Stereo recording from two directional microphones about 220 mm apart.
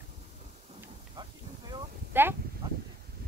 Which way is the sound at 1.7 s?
10° right (ahead or behind).